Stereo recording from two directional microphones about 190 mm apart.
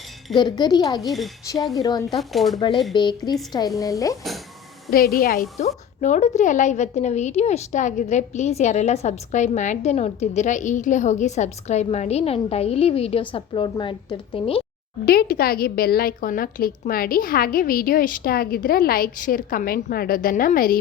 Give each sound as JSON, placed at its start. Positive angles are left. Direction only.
{"t": 0.3, "sound": "speech", "side_deg": 20}
{"t": 1.0, "sound": "speech", "side_deg": 0}
{"t": 1.7, "sound": "speech", "side_deg": 20}
{"t": 2.0, "sound": "speech", "side_deg": 0}
{"t": 2.9, "sound": "speech", "side_deg": 25}
{"t": 4.9, "sound": "a woman's voice", "side_deg": 50}
{"t": 5.5, "sound": "a woman's voice", "side_deg": 35}
{"t": 15.0, "sound": "a woman's voice", "side_deg": 55}